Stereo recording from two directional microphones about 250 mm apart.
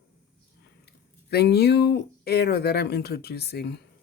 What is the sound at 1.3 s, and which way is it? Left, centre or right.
Speech, left.